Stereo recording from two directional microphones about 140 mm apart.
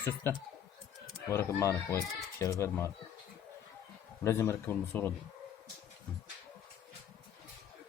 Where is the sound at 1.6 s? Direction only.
20° left (ahead or behind).